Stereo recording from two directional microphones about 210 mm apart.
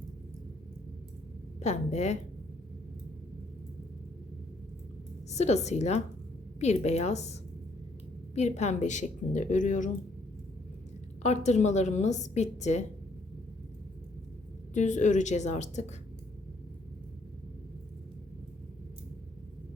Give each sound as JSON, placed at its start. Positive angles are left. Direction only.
{"t": 1.5, "sound": "a woman's voice", "side_deg": 30}
{"t": 5.3, "sound": "a woman's voice", "side_deg": 30}
{"t": 8.4, "sound": "a woman's voice", "side_deg": 35}
{"t": 11.2, "sound": "a woman's voice", "side_deg": 35}
{"t": 14.7, "sound": "a woman's voice", "side_deg": 35}